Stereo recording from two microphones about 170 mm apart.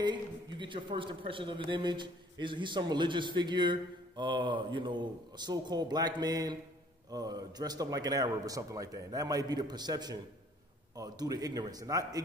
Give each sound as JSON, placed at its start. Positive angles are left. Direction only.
{"t": 0.0, "sound": "a man's voice", "side_deg": -25}